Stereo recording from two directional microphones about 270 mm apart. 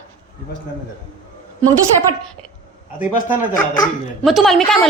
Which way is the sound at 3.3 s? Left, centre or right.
Left.